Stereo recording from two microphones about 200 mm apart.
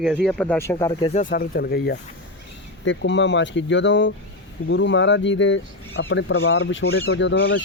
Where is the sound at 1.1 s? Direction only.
40° left (ahead or behind).